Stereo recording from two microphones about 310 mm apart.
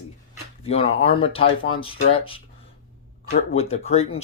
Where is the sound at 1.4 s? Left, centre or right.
Left.